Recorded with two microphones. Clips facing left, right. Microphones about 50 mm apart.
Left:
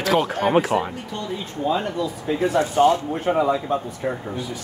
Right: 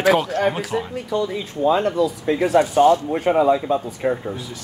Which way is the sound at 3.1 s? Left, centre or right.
Right.